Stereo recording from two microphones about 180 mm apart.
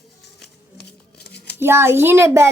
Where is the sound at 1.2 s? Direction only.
65° left (ahead or behind).